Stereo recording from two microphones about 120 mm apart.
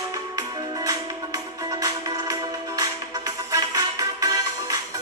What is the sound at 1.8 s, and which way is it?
Music, 30° right (ahead or behind).